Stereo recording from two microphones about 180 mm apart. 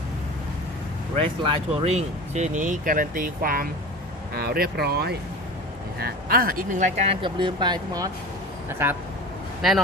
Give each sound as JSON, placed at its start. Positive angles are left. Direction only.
{"t": 1.1, "sound": "speech", "side_deg": -35}
{"t": 9.6, "sound": "a man's voice", "side_deg": 0}